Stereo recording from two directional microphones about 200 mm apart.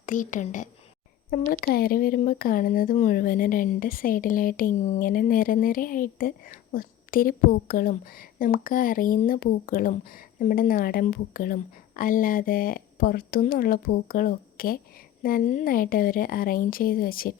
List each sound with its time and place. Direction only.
0.0 s speech: 40° left (ahead or behind)